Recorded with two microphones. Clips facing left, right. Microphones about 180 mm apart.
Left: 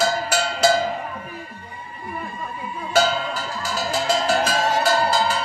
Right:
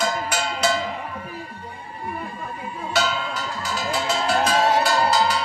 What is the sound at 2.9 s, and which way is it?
Music, 40° left (ahead or behind).